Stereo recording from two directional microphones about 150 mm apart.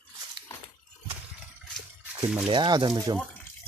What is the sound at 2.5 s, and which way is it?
Speech, 30° right (ahead or behind).